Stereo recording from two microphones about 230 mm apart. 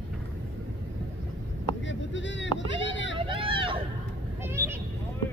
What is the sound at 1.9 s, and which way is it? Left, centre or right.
Vehicle, left.